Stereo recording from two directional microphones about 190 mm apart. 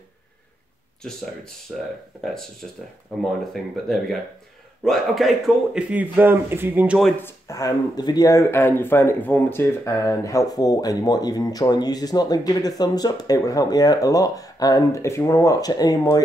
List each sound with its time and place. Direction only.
1.7 s speech: centre (ahead or behind)
3.7 s speech: centre (ahead or behind)
7.2 s speech: 15° left (ahead or behind)